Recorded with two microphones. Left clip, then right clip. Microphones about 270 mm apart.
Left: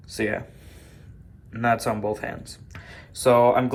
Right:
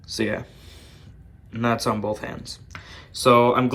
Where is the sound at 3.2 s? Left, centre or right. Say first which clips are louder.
Right 1 dB; right.